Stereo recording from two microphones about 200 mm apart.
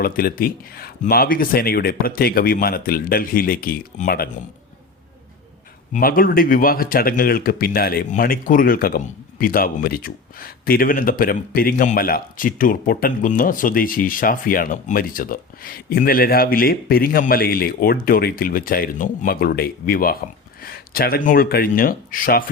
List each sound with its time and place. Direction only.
0.0 s speech: 45° left (ahead or behind)
5.9 s speech: 45° left (ahead or behind)